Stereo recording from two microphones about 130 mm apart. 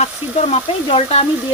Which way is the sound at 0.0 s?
55° left (ahead or behind).